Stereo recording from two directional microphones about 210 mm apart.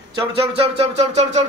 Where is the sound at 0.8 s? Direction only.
30° right (ahead or behind).